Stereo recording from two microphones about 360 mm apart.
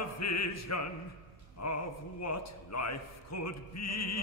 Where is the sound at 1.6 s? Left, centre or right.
Left.